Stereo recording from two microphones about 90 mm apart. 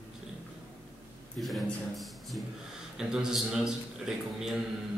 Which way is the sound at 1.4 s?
Centre (ahead or behind).